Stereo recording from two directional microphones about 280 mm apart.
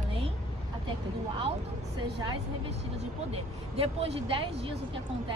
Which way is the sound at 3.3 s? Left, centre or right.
Right.